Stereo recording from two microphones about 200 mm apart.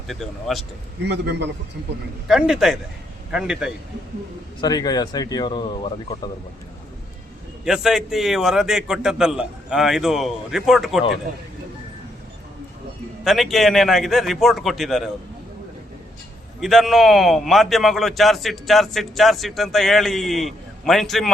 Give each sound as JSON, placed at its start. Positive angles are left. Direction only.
{"t": 0.1, "sound": "a man's voice", "side_deg": 0}
{"t": 1.0, "sound": "a man's voice", "side_deg": -55}
{"t": 2.2, "sound": "a man's voice", "side_deg": 0}
{"t": 4.6, "sound": "speech", "side_deg": 20}
{"t": 7.6, "sound": "a man's voice", "side_deg": 0}
{"t": 13.2, "sound": "a man's voice", "side_deg": 0}
{"t": 16.6, "sound": "a man's voice", "side_deg": 0}